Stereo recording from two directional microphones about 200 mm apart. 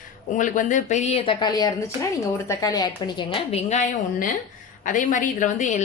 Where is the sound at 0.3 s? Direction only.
40° left (ahead or behind).